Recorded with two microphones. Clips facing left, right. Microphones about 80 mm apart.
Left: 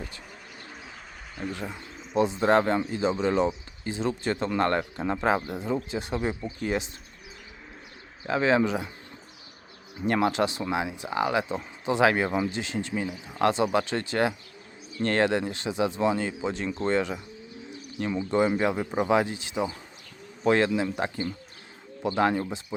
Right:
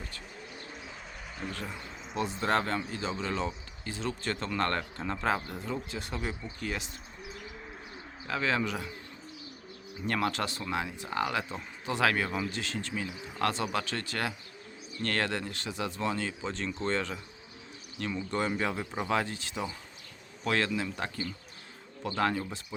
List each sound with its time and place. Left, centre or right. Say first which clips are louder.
1.5 s speech: left 5 dB; centre
8.3 s speech: left 7 dB; left
10.1 s speech: left 7 dB; left
18.2 s speech: left 8 dB; centre